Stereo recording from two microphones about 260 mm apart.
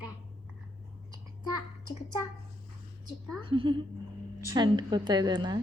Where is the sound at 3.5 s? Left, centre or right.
Centre.